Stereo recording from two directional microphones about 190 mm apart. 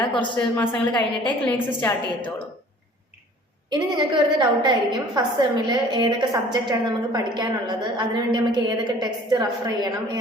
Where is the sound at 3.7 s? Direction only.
20° right (ahead or behind).